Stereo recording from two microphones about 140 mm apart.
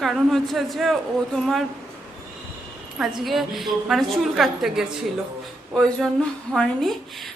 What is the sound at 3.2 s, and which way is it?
A woman's voice, centre (ahead or behind).